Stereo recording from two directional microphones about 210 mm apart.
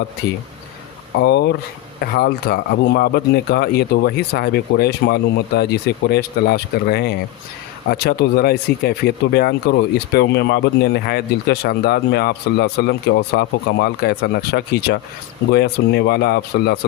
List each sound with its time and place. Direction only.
1.1 s speech: 55° left (ahead or behind)